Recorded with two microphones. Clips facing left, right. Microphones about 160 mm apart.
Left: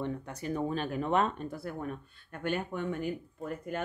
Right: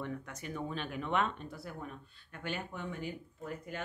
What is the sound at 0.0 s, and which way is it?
Speech, 30° left (ahead or behind).